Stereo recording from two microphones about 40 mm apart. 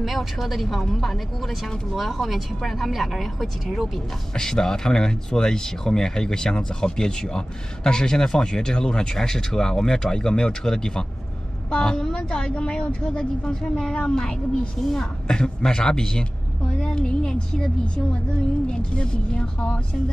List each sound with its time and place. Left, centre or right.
0.0 s speech: centre
4.4 s a woman's voice: centre